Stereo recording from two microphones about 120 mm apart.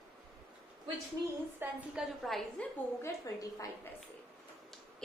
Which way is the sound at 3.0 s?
30° left (ahead or behind).